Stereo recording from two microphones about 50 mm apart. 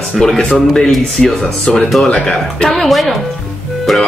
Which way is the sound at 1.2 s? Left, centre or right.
Centre.